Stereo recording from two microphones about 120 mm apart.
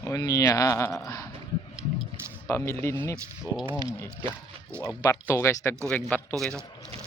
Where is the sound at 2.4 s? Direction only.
20° left (ahead or behind).